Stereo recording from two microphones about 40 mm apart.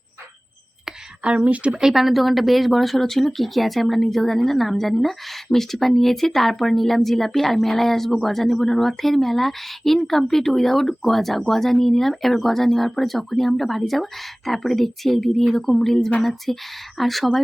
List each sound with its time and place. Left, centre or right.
1.2 s speech: right
1.8 s speech: centre